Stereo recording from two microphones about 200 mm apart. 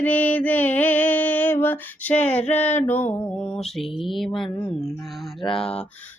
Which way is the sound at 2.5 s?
10° left (ahead or behind).